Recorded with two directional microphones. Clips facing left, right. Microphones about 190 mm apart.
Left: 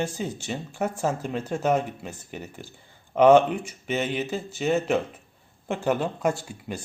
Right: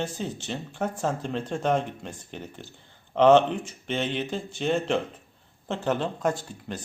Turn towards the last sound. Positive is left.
turn(degrees=10)  # may be behind; listen again after turning